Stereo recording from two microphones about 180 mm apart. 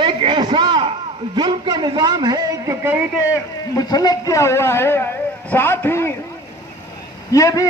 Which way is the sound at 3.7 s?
20° left (ahead or behind).